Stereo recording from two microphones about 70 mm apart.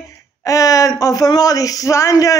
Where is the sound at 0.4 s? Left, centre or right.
Left.